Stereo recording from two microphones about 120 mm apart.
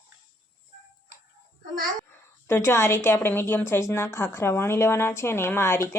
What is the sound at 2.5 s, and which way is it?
A woman's voice, 20° left (ahead or behind).